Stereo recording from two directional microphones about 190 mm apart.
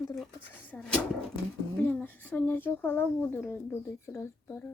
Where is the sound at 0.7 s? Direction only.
10° left (ahead or behind).